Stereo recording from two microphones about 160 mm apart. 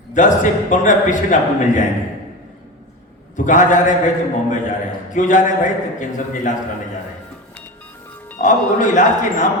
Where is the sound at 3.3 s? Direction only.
50° left (ahead or behind).